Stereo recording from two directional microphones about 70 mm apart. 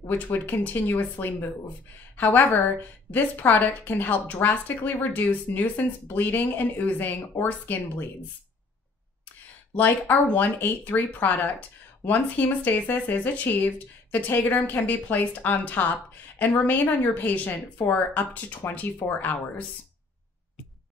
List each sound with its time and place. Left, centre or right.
0.1 s a woman's voice: left
9.8 s a woman's voice: left